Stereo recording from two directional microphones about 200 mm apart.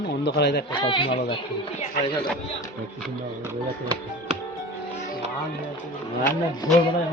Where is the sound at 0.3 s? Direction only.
55° left (ahead or behind).